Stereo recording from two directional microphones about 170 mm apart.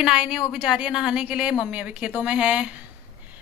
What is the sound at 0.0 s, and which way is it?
A woman's voice, 5° right (ahead or behind).